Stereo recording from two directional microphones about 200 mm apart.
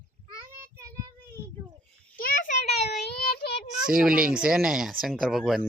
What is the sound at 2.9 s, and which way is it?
Child singing, 55° left (ahead or behind).